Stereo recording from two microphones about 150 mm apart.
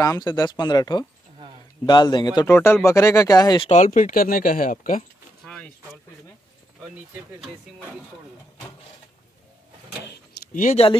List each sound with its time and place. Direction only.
0.0 s speech: 25° left (ahead or behind)
3.7 s speech: 55° left (ahead or behind)
5.4 s vehicle: 5° left (ahead or behind)
10.5 s speech: 60° left (ahead or behind)